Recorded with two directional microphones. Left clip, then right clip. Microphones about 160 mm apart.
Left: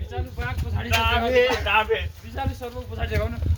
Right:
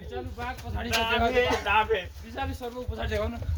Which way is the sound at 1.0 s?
5° right (ahead or behind).